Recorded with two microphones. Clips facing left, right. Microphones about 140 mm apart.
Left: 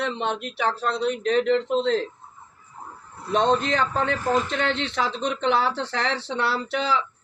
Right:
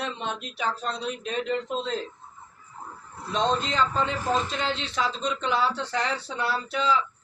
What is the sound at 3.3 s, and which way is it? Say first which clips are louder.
A man's voice: left 4 dB; 60° left (ahead or behind).